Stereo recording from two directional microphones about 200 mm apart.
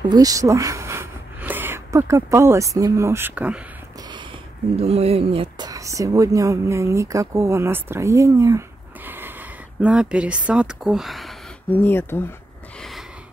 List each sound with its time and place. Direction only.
0.1 s speech: 15° right (ahead or behind)
4.7 s speech: 30° right (ahead or behind); by 12.4 s 10° left (ahead or behind)